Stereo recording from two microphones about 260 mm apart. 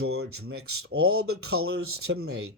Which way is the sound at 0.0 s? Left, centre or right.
Right.